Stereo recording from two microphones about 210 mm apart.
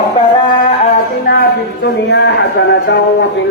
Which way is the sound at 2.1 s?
55° left (ahead or behind).